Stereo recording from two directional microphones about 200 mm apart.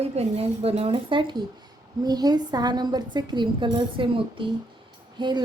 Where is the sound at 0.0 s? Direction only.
30° right (ahead or behind).